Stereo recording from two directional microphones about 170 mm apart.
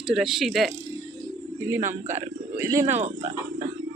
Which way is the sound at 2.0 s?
15° right (ahead or behind).